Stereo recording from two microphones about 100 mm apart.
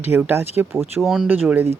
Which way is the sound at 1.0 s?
Centre (ahead or behind).